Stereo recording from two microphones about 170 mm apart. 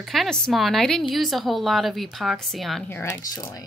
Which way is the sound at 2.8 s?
10° left (ahead or behind).